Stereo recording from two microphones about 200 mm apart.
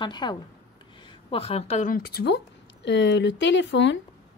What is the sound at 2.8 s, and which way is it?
Speech, 60° left (ahead or behind).